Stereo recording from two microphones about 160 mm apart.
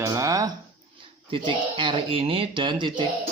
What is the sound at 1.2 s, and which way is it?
Speech, 30° right (ahead or behind).